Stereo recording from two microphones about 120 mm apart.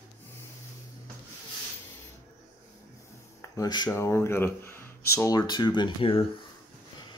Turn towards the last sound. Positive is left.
turn(degrees=45)  # may be behind; listen again after turning